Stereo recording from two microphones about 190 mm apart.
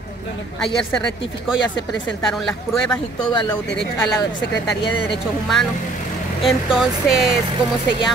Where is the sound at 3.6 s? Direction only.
65° left (ahead or behind).